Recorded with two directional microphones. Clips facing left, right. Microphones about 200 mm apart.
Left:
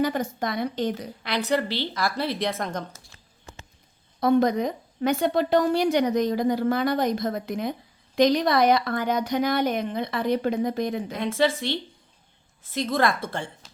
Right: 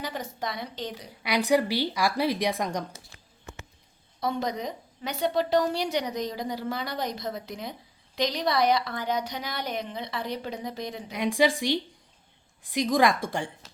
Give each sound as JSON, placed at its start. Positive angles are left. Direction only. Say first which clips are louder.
{"t": 0.0, "sound": "a woman's voice", "louder": "left 8 dB", "side_deg": 50}
{"t": 1.2, "sound": "a woman's voice", "louder": "right 2 dB", "side_deg": -10}
{"t": 4.2, "sound": "a woman's voice", "louder": "left 9 dB", "side_deg": 55}
{"t": 11.1, "sound": "a woman's voice", "louder": "right 3 dB", "side_deg": -15}